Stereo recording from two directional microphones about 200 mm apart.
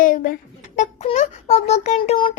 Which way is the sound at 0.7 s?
35° left (ahead or behind).